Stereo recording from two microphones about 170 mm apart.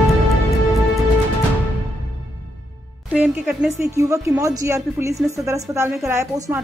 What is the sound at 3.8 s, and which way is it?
A woman's voice, 20° right (ahead or behind).